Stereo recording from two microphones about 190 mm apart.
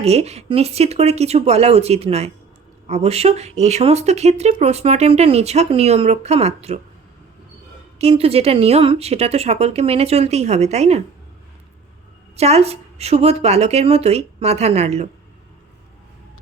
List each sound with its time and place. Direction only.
0.0 s speech: 35° right (ahead or behind)
7.9 s speech: 30° right (ahead or behind)
12.4 s speech: 35° right (ahead or behind)